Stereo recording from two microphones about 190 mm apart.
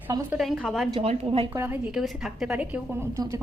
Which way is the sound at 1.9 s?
Centre (ahead or behind).